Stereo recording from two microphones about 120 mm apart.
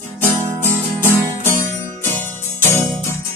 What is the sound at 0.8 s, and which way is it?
Music, 20° left (ahead or behind).